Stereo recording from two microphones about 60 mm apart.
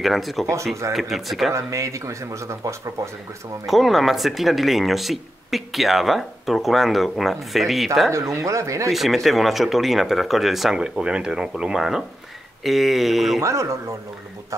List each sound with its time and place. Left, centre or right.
0.0 s speech: centre
1.5 s speech: right
3.6 s speech: centre
8.1 s speech: right
8.9 s speech: centre
12.6 s speech: centre
13.4 s speech: right